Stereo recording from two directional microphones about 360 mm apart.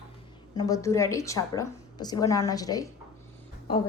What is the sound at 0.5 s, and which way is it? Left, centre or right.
A woman's voice, centre.